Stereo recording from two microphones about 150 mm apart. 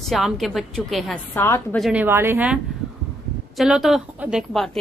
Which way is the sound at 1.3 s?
15° left (ahead or behind).